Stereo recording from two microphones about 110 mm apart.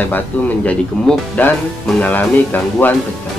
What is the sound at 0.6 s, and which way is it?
Speech, 5° left (ahead or behind).